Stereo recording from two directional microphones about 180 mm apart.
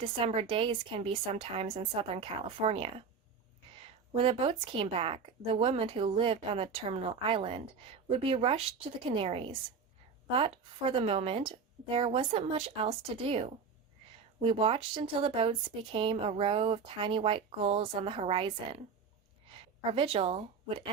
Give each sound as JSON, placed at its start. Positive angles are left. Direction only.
{"t": 0.0, "sound": "speech", "side_deg": -30}
{"t": 4.1, "sound": "speech", "side_deg": -30}